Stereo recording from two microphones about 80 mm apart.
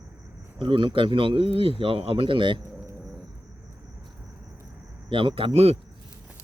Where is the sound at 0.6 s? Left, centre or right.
Right.